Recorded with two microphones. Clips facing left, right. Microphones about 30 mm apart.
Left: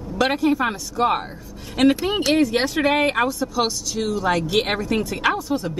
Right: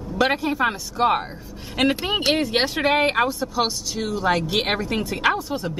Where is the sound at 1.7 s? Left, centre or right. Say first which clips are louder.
Left 3 dB; centre.